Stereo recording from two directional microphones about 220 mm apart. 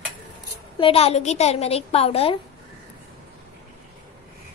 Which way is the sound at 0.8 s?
25° left (ahead or behind).